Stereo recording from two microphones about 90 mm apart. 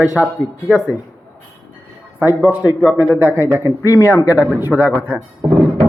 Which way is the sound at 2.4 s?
15° right (ahead or behind).